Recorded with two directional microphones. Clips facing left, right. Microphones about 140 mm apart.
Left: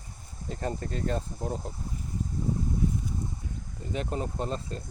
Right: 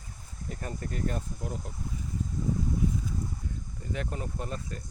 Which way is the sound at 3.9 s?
25° left (ahead or behind).